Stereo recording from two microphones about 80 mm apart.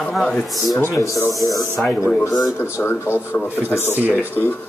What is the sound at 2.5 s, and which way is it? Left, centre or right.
Speech, left.